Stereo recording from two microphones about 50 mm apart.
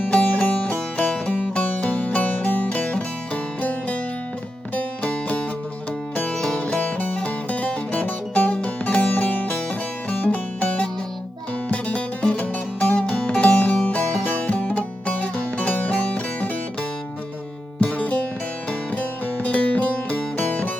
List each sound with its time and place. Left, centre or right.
0.1 s music: left
1.3 s music: left
2.6 s music: left
6.3 s music: centre
6.6 s music: left
14.7 s music: left
17.7 s music: left